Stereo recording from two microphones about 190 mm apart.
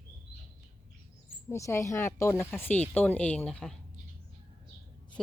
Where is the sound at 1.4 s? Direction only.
15° left (ahead or behind).